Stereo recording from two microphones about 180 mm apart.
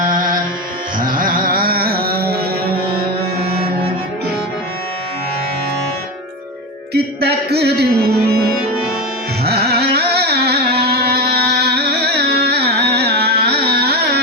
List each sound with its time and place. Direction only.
0.9 s music: 50° right (ahead or behind)
6.9 s music: 65° right (ahead or behind)
9.4 s carnatic music: 65° right (ahead or behind)